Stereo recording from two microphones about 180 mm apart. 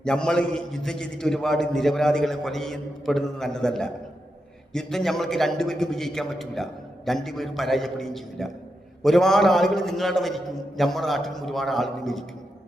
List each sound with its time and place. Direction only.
0.0 s a man's voice: 5° left (ahead or behind)